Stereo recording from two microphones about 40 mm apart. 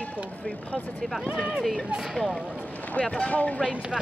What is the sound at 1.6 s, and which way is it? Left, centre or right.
Speech, centre.